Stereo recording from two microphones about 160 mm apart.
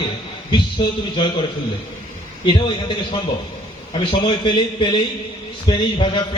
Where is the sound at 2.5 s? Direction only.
30° left (ahead or behind).